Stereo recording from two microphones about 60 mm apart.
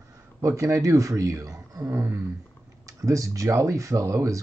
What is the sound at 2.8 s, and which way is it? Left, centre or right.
Speech, right.